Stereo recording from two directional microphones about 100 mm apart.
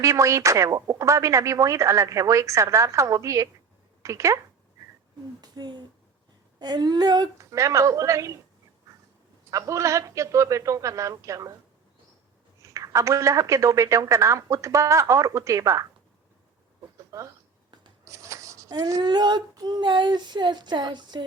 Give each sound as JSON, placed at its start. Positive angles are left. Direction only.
{"t": 0.0, "sound": "speech", "side_deg": -30}
{"t": 5.4, "sound": "speech", "side_deg": -45}
{"t": 9.5, "sound": "speech", "side_deg": -30}
{"t": 12.6, "sound": "speech", "side_deg": -30}
{"t": 17.1, "sound": "speech", "side_deg": -30}
{"t": 18.0, "sound": "writing", "side_deg": -30}
{"t": 18.7, "sound": "speech", "side_deg": -35}
{"t": 19.0, "sound": "child singing", "side_deg": -45}